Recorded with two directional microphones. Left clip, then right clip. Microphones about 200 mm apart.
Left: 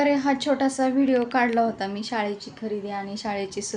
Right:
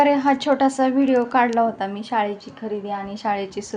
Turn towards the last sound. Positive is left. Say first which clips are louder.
# right 5 dB
turn(degrees=0)  # may be behind; listen again after turning